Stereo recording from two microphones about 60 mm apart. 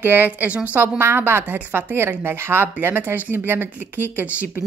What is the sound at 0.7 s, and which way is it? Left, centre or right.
A woman's voice, right.